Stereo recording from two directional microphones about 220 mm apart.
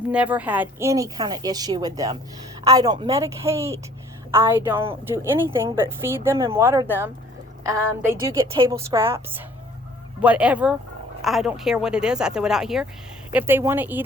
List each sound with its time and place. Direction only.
0.1 s a woman's voice: 5° right (ahead or behind)